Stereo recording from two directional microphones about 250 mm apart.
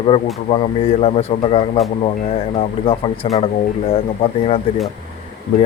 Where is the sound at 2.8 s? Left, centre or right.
Left.